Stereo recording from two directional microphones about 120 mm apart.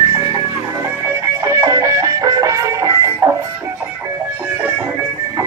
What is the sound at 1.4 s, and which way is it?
Music, 25° right (ahead or behind).